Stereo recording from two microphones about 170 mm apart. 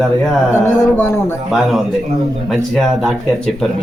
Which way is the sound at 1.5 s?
Centre (ahead or behind).